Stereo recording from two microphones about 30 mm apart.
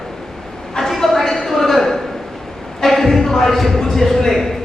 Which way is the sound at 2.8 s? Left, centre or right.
Centre.